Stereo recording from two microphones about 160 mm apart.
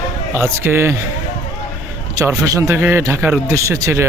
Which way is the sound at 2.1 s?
20° right (ahead or behind).